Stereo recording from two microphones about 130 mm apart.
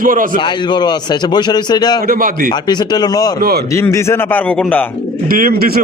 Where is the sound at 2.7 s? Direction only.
35° left (ahead or behind); by 4.8 s 10° left (ahead or behind).